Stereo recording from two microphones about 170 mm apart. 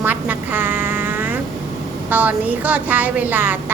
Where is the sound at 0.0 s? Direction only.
10° right (ahead or behind).